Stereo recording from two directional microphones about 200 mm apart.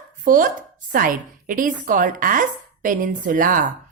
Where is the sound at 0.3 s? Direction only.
40° right (ahead or behind).